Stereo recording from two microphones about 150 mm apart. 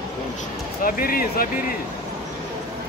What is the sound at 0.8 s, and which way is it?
Speech, 75° left (ahead or behind).